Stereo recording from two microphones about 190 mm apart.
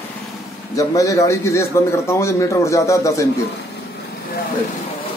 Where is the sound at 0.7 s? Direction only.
15° left (ahead or behind).